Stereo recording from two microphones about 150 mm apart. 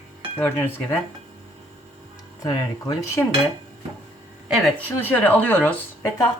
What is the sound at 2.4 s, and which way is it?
Speech, 25° left (ahead or behind).